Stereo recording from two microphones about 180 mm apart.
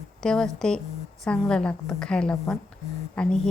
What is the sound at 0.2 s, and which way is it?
A woman's voice, 5° left (ahead or behind).